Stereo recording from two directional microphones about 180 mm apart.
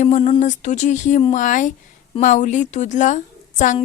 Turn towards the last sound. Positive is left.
turn(degrees=45)  # may be behind; listen again after turning